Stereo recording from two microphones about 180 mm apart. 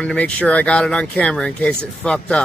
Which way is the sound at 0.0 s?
5° left (ahead or behind).